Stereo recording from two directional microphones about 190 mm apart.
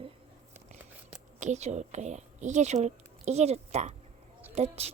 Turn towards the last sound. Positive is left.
turn(degrees=-35)  # may be behind; listen again after turning